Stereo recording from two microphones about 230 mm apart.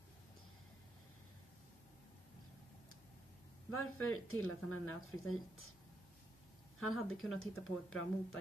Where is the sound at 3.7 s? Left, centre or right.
Left.